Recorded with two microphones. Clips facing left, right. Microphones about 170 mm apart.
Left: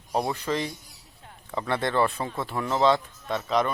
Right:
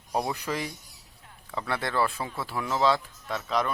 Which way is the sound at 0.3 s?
5° right (ahead or behind).